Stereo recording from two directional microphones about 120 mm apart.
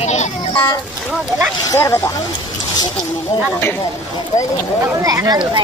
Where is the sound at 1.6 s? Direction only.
25° left (ahead or behind).